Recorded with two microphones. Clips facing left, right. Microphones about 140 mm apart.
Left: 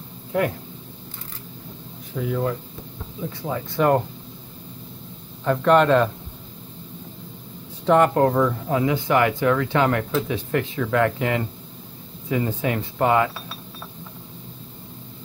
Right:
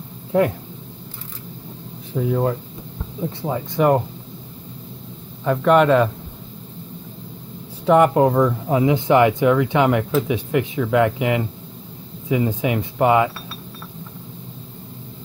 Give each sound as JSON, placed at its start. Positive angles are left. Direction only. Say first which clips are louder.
{"t": 2.1, "sound": "speech", "louder": "right 4 dB", "side_deg": -30}
{"t": 5.4, "sound": "a man's voice", "louder": "right 2 dB", "side_deg": -5}
{"t": 7.8, "sound": "speech", "louder": "right 3 dB", "side_deg": -10}